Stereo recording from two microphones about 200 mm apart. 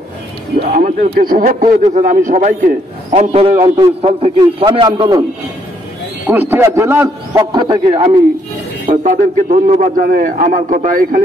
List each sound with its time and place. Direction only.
0.7 s a man's voice: 40° right (ahead or behind)
3.1 s a man's voice: 30° right (ahead or behind)
6.2 s a man's voice: 10° right (ahead or behind)
7.5 s a man's voice: 25° right (ahead or behind)
9.0 s a man's voice: 40° right (ahead or behind)